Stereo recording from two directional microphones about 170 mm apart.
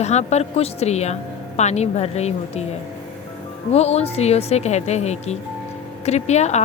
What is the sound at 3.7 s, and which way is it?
A woman's voice, 40° left (ahead or behind).